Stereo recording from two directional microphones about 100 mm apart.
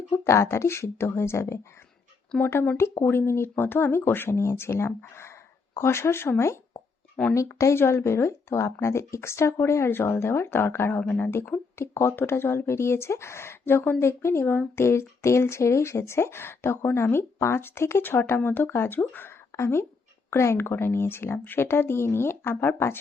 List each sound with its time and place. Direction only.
0.1 s speech: 25° left (ahead or behind)